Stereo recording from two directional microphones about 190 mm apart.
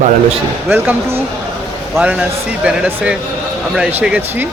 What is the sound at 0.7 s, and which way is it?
Speech, 10° right (ahead or behind).